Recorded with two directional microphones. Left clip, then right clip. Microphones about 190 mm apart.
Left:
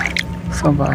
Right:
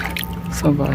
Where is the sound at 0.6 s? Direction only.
5° right (ahead or behind).